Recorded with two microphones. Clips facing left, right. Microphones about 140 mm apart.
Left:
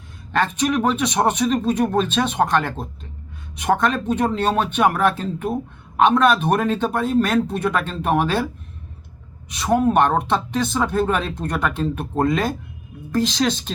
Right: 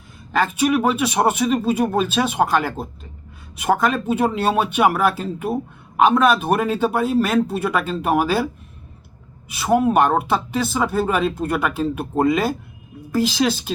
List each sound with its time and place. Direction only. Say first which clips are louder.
0.3 s speech: right 2 dB; 5° right (ahead or behind)
9.5 s speech: right 1 dB; 5° right (ahead or behind)